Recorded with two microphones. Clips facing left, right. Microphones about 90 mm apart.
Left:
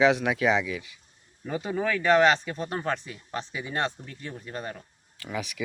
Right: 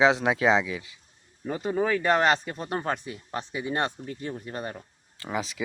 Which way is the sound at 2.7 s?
15° right (ahead or behind).